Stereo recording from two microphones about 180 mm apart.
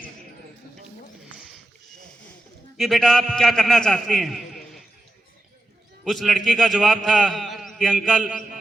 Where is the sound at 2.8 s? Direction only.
Centre (ahead or behind).